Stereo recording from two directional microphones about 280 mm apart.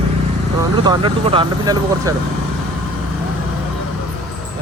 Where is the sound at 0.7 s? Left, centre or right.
Centre.